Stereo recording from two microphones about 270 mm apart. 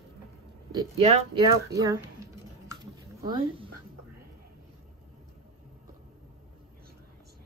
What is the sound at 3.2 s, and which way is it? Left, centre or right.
Speech, centre.